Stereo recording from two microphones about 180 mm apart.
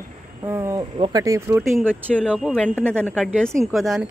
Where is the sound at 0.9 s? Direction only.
30° right (ahead or behind).